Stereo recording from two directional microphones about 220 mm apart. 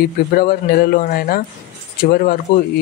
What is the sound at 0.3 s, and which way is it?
Speech, 45° left (ahead or behind).